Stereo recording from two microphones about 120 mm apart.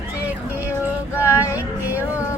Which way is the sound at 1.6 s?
15° right (ahead or behind).